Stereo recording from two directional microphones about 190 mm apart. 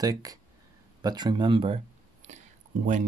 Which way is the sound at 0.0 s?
20° right (ahead or behind).